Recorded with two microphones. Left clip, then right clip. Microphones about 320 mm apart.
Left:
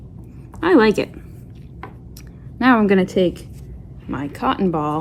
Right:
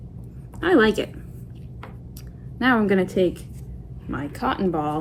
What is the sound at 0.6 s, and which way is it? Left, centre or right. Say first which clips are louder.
Speech: left 4 dB; left.